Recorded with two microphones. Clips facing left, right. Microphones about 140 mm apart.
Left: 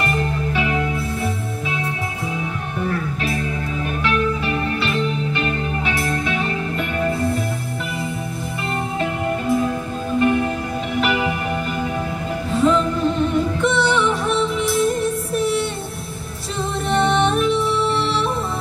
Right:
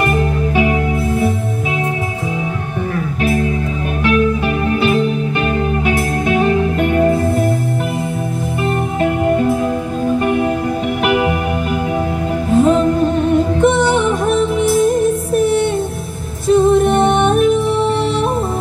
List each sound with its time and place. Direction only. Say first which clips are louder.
0.0 s music: right 6 dB; 50° right (ahead or behind)
4.0 s music: right 7 dB; 45° right (ahead or behind)
11.1 s music: right 7 dB; 55° right (ahead or behind)
12.5 s music: right 6 dB; 45° right (ahead or behind)